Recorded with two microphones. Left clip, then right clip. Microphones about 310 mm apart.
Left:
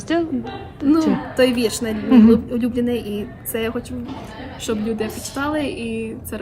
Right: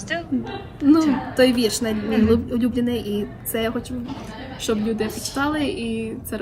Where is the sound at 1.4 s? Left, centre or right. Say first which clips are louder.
Even; centre.